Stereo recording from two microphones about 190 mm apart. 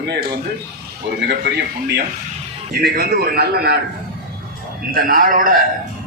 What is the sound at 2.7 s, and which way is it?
A man's voice, 55° right (ahead or behind).